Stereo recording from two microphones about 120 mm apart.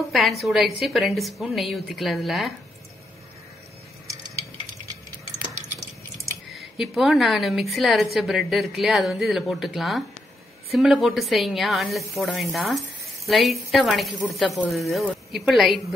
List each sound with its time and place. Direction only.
0.1 s speech: centre (ahead or behind)
6.5 s speech: centre (ahead or behind)